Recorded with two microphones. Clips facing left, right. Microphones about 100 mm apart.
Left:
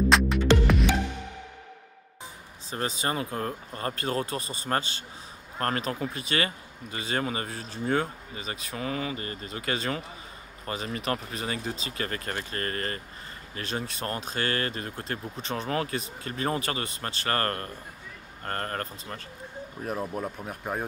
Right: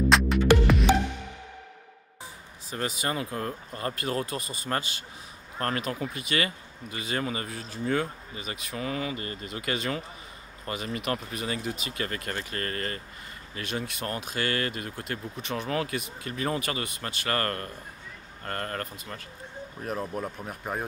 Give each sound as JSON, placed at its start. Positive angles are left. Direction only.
{"t": 0.1, "sound": "music", "side_deg": 0}
{"t": 2.7, "sound": "speech", "side_deg": 30}
{"t": 11.0, "sound": "speech", "side_deg": 35}
{"t": 19.8, "sound": "speech", "side_deg": 5}